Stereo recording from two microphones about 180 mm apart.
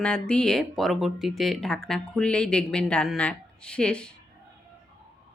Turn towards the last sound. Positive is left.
turn(degrees=5)  # may be behind; listen again after turning